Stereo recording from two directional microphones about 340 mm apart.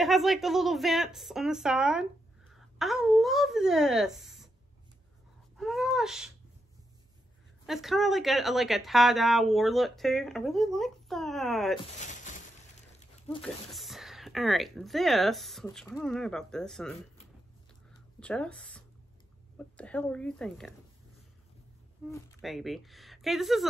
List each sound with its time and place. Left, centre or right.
0.0 s speech: centre
5.6 s speech: centre
7.6 s speech: centre
12.0 s a sound: left
13.4 s speech: centre
18.2 s speech: centre
22.1 s speech: centre